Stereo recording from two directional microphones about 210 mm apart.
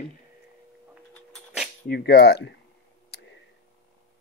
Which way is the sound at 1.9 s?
45° left (ahead or behind).